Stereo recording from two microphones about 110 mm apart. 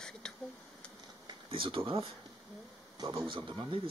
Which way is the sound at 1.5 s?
55° right (ahead or behind).